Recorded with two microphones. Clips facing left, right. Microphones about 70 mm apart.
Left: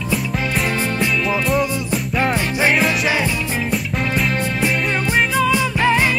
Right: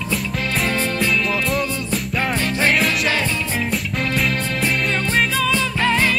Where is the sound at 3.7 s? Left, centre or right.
Centre.